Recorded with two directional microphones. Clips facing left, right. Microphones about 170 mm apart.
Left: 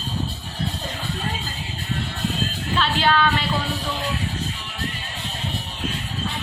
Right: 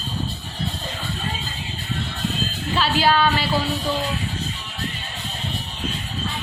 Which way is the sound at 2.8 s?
5° right (ahead or behind).